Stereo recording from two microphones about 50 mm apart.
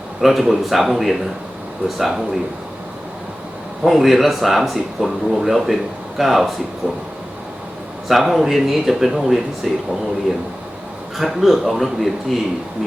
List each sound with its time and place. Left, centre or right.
0.2 s speech: centre
3.8 s speech: centre
6.8 s a sound: right
8.0 s speech: centre
11.2 s speech: centre